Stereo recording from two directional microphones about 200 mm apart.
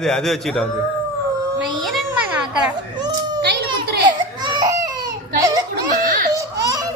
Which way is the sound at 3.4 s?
55° right (ahead or behind).